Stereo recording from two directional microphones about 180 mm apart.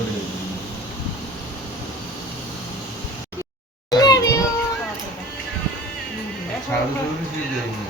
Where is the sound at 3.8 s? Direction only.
20° left (ahead or behind).